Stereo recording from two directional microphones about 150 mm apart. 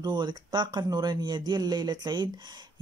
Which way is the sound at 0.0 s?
30° right (ahead or behind).